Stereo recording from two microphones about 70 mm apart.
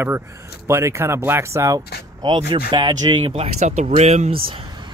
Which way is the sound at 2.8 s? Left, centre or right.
Right.